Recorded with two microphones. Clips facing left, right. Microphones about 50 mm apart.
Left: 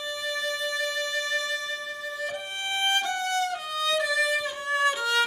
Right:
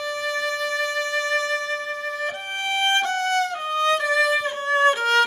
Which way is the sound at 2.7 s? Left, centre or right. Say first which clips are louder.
Right 5 dB; right.